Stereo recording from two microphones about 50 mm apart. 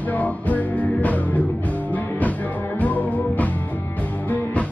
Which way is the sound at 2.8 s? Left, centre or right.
Left.